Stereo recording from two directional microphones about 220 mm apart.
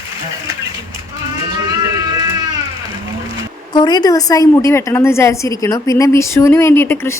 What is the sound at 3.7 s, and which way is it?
A woman's voice, 20° left (ahead or behind).